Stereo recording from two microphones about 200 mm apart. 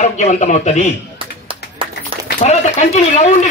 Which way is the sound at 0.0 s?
35° left (ahead or behind).